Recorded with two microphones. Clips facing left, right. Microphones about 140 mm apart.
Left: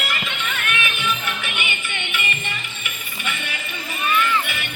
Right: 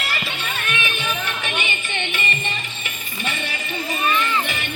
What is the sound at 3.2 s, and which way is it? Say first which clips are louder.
Music: right 2 dB; 35° right (ahead or behind).